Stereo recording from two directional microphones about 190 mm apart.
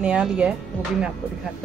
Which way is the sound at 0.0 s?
5° right (ahead or behind).